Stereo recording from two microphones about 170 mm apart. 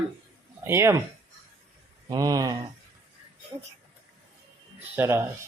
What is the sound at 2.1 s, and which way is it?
Speech, 20° right (ahead or behind).